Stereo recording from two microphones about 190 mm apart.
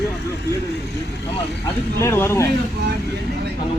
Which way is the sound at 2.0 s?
15° left (ahead or behind).